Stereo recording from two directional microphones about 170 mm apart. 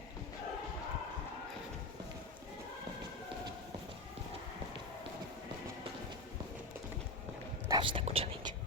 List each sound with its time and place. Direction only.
7.7 s speech: 30° right (ahead or behind)